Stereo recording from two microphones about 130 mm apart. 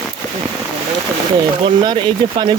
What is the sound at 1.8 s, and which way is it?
Speech, 35° right (ahead or behind).